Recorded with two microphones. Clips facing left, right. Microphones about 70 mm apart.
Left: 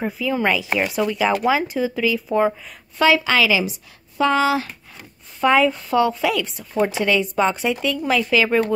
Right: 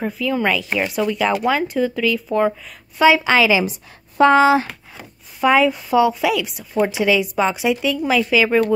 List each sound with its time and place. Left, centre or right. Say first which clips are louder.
0.0 s speech: right 1 dB; centre
3.0 s a woman's voice: right 3 dB; right
5.4 s speech: right 1 dB; centre